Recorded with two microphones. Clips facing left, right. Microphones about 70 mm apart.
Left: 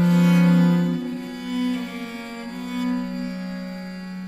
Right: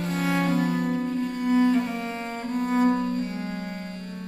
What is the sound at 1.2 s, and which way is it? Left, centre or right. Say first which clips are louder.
Cello: right 7 dB; right.